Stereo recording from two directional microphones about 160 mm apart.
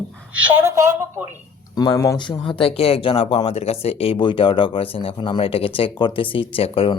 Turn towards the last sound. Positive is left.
turn(degrees=35)  # may be behind; listen again after turning